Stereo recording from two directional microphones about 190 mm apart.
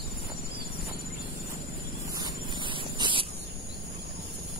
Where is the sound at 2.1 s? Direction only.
25° right (ahead or behind).